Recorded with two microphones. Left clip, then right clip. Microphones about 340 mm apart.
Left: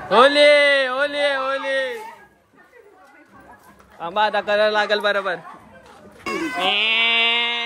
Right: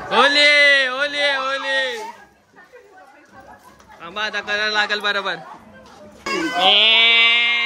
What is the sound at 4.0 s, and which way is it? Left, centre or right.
A man's voice, centre.